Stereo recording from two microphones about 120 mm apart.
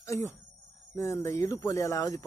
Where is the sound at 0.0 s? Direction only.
25° left (ahead or behind).